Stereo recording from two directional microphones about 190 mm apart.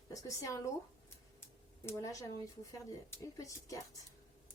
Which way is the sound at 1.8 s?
15° left (ahead or behind).